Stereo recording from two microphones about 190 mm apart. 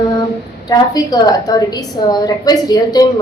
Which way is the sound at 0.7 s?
20° left (ahead or behind).